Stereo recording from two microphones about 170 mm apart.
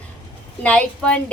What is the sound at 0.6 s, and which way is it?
Speech, 5° left (ahead or behind).